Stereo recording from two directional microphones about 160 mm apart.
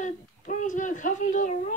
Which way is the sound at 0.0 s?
55° left (ahead or behind).